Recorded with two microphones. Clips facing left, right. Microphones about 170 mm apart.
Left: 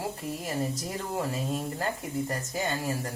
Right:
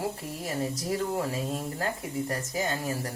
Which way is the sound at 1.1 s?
Centre (ahead or behind).